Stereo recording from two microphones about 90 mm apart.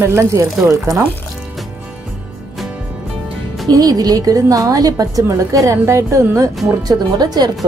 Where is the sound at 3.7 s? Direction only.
45° right (ahead or behind).